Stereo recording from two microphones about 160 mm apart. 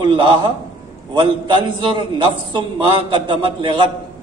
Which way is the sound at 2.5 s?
30° right (ahead or behind).